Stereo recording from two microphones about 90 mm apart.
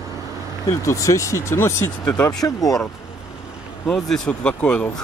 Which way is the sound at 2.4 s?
40° left (ahead or behind).